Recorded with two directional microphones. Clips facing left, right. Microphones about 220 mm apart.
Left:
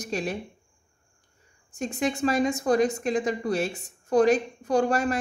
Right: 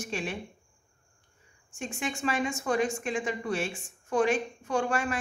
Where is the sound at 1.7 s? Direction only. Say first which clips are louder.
Left 7 dB; 40° left (ahead or behind).